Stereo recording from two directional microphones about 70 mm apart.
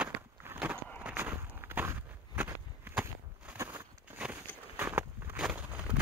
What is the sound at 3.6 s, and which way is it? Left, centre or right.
Walk, right.